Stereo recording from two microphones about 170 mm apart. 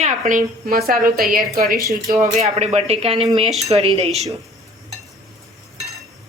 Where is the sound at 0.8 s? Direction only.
60° right (ahead or behind).